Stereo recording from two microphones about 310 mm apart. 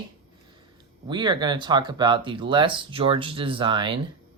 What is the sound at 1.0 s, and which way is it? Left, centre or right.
Speech, centre.